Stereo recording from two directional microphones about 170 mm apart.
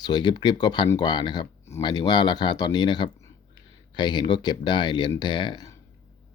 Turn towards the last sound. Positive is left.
turn(degrees=25)  # may be behind; listen again after turning